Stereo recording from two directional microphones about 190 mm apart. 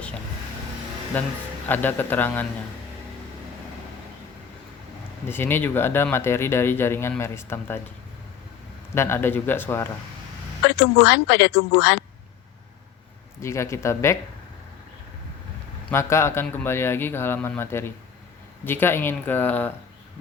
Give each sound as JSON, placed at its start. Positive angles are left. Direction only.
{"t": 1.2, "sound": "speech", "side_deg": 10}
{"t": 5.3, "sound": "speech", "side_deg": 10}
{"t": 9.0, "sound": "speech", "side_deg": 10}
{"t": 11.0, "sound": "a woman's voice", "side_deg": 65}
{"t": 13.4, "sound": "speech", "side_deg": 15}
{"t": 15.9, "sound": "speech", "side_deg": 15}